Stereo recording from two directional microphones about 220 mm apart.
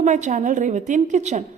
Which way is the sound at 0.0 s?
35° right (ahead or behind).